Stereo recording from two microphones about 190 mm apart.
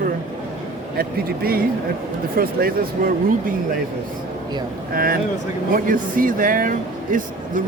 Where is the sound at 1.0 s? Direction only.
50° right (ahead or behind).